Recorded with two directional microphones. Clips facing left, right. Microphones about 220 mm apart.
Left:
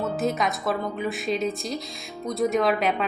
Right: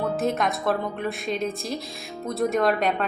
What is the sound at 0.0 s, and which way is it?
A woman's voice, centre (ahead or behind).